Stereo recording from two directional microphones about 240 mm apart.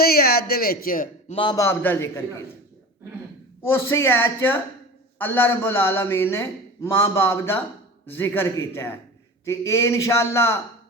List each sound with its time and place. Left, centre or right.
0.0 s a man's voice: left
1.4 s a man's voice: centre
3.6 s a man's voice: centre